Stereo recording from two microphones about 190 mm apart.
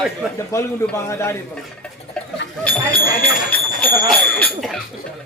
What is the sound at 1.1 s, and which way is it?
Speech, 15° left (ahead or behind).